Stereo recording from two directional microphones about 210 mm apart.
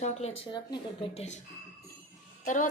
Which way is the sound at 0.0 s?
30° left (ahead or behind).